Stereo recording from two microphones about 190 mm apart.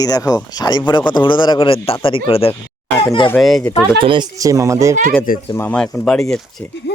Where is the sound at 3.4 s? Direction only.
Centre (ahead or behind).